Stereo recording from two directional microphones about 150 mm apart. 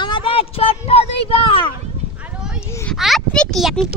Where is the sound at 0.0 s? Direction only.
35° left (ahead or behind).